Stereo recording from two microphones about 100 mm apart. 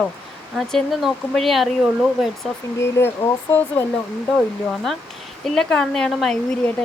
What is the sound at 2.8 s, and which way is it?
Speech, 25° left (ahead or behind).